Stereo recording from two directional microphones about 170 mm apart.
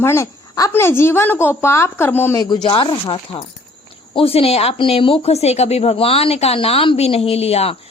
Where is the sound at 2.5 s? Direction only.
30° left (ahead or behind).